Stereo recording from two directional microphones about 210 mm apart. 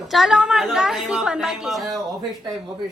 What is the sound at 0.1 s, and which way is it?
A woman's voice, centre (ahead or behind).